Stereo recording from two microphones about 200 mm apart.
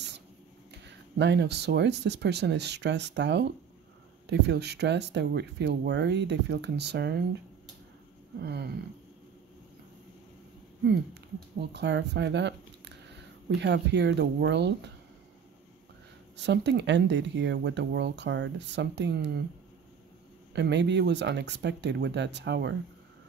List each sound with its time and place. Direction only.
0.8 s speech: 60° right (ahead or behind)
8.4 s speech: 55° right (ahead or behind)
11.7 s speech: 60° right (ahead or behind)
16.4 s speech: 60° right (ahead or behind)
20.5 s speech: 60° right (ahead or behind)